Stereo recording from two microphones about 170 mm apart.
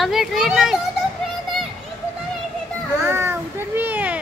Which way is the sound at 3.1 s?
15° right (ahead or behind).